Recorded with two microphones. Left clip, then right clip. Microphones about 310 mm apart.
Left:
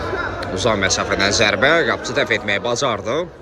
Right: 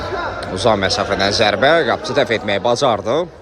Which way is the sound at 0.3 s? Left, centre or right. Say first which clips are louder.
Right 4 dB; centre.